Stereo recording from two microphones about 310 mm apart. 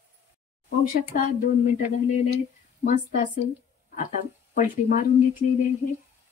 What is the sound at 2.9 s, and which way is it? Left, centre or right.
A woman's voice, left.